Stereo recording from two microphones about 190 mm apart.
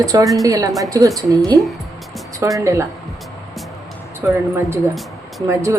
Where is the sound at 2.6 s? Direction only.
15° right (ahead or behind).